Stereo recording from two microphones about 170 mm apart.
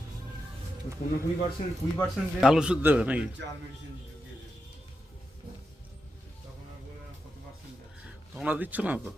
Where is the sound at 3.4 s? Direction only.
90° right.